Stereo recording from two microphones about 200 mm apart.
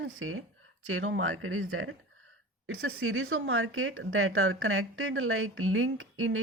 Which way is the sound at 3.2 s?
70° right (ahead or behind).